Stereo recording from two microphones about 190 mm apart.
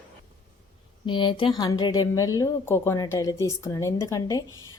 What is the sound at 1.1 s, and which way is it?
Speech, 25° left (ahead or behind).